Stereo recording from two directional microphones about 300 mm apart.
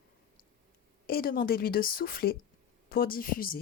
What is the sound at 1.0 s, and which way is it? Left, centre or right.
A woman's voice, left.